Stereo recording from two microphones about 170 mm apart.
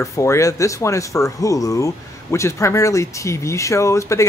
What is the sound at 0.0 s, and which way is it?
Speech, 15° left (ahead or behind).